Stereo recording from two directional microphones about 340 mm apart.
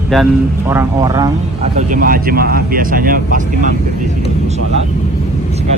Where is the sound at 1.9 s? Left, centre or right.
Right.